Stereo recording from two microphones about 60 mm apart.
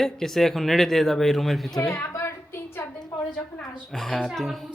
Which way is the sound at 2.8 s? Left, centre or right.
Left.